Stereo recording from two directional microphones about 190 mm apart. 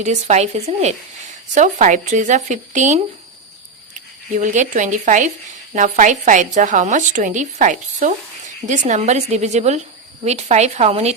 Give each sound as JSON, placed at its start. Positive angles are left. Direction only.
{"t": 0.0, "sound": "a woman's voice", "side_deg": -35}
{"t": 4.4, "sound": "a woman's voice", "side_deg": -40}